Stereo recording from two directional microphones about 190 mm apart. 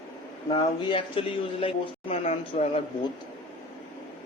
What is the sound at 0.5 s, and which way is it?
A man's voice, 25° left (ahead or behind).